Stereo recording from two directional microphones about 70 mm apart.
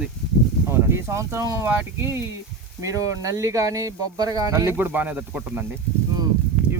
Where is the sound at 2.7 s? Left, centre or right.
Right.